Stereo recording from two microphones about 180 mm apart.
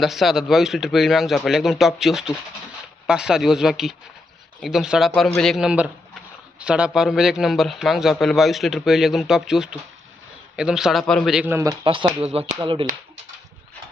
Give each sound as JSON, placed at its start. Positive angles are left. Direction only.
{"t": 0.0, "sound": "a man's voice", "side_deg": 0}
{"t": 11.5, "sound": "speech", "side_deg": -20}